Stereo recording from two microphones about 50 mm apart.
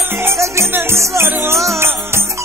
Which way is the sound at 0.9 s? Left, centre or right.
Right.